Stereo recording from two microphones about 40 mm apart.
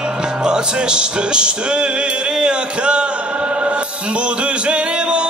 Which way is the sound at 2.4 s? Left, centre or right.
Right.